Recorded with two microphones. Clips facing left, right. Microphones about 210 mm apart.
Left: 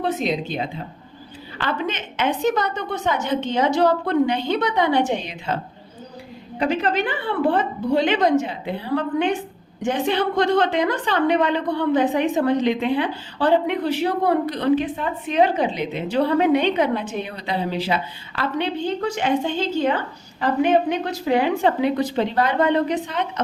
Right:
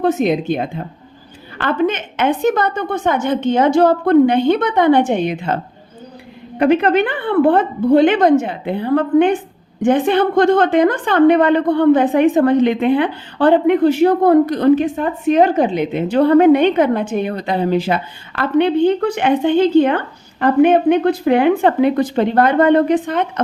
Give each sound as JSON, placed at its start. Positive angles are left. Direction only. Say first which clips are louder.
{"t": 0.0, "sound": "a woman's voice", "louder": "right 7 dB", "side_deg": -50}
{"t": 6.6, "sound": "a woman's voice", "louder": "right 8 dB", "side_deg": -60}